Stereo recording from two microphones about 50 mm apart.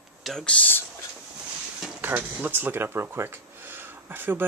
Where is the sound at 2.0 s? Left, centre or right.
Right.